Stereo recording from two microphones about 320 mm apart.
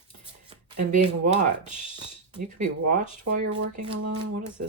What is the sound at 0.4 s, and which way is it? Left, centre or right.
Speech, right.